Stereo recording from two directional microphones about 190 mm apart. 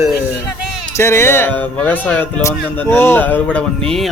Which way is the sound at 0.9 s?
15° left (ahead or behind).